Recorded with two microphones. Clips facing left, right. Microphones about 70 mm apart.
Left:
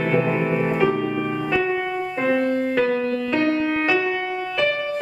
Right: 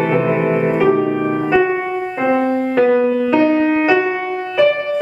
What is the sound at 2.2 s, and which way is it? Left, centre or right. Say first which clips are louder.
Music: right 5 dB; centre.